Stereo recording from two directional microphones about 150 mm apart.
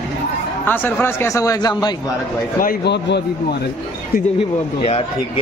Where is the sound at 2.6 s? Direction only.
75° left (ahead or behind).